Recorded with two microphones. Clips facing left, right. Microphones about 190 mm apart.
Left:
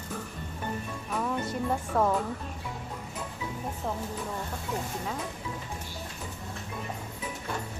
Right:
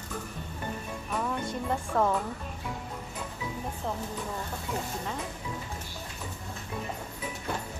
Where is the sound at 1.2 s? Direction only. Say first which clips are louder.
Left 3 dB; 5° left (ahead or behind).